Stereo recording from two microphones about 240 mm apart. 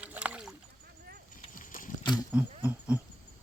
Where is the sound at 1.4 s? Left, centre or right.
Left.